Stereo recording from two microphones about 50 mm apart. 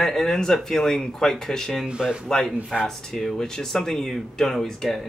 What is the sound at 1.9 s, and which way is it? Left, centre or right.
Speech, centre.